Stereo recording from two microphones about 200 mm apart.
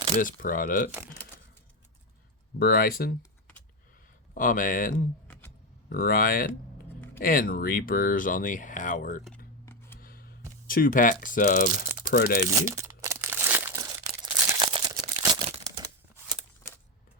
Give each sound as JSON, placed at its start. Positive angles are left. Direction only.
{"t": 0.2, "sound": "speech", "side_deg": 45}
{"t": 2.6, "sound": "speech", "side_deg": 50}
{"t": 4.4, "sound": "speech", "side_deg": 40}
{"t": 9.6, "sound": "a sound", "side_deg": 10}
{"t": 10.0, "sound": "a sound", "side_deg": 45}
{"t": 10.7, "sound": "speech", "side_deg": 45}
{"t": 12.5, "sound": "crumpling", "side_deg": -15}
{"t": 14.2, "sound": "crumpling", "side_deg": -25}